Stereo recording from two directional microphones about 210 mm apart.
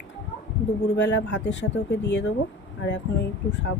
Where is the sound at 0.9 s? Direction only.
60° left (ahead or behind).